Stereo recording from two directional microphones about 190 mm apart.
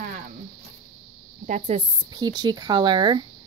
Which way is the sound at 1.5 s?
35° right (ahead or behind).